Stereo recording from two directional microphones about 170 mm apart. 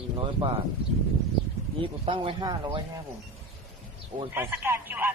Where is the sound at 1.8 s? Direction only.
30° right (ahead or behind).